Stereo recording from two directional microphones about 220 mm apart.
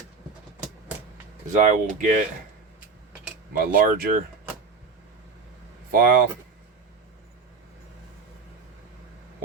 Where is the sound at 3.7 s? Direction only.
40° right (ahead or behind).